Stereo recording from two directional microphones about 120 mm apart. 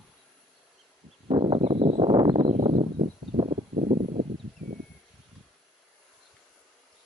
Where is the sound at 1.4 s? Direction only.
50° right (ahead or behind).